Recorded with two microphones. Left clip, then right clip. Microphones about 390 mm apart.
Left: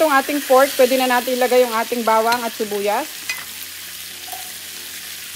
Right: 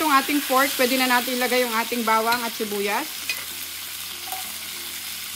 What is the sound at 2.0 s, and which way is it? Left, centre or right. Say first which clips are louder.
Frying: left 5 dB; left.